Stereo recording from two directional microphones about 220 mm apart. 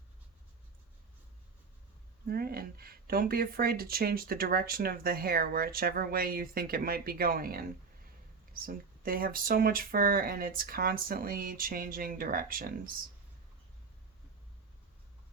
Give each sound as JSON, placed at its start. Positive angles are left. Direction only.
{"t": 2.2, "sound": "speech", "side_deg": -45}